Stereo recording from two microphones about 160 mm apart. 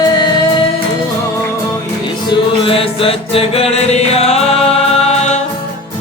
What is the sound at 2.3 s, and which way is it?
Music, 35° left (ahead or behind).